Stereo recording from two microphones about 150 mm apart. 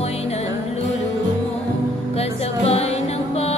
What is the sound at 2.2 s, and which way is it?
Music, 45° left (ahead or behind).